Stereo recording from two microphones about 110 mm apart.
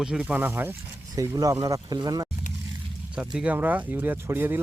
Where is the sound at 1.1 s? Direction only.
30° right (ahead or behind).